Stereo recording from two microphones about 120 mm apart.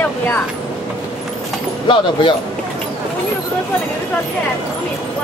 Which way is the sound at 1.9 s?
45° left (ahead or behind).